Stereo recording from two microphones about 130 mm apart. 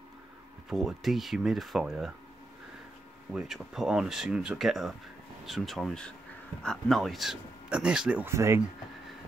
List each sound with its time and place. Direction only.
0.7 s speech: 5° right (ahead or behind)
3.3 s speech: 5° right (ahead or behind)
8.3 s speech: 20° right (ahead or behind)